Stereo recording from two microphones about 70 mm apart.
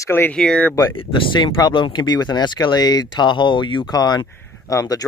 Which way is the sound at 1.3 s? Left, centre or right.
Left.